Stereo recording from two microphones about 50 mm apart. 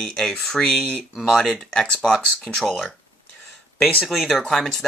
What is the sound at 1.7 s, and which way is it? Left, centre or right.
Speech, centre.